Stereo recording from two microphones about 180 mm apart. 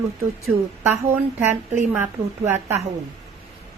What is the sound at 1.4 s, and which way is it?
A woman's voice, 10° right (ahead or behind).